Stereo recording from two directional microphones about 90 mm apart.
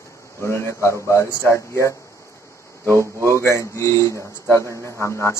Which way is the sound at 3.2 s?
30° left (ahead or behind).